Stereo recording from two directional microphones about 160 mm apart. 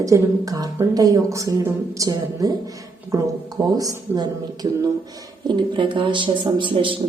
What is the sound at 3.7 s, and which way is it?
Speech, 25° right (ahead or behind).